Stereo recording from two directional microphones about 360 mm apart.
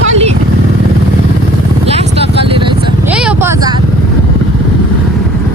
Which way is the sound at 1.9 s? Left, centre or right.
Centre.